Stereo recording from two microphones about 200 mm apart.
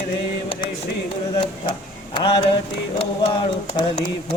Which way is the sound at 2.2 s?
25° left (ahead or behind).